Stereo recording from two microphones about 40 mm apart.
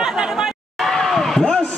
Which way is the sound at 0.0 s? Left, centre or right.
Centre.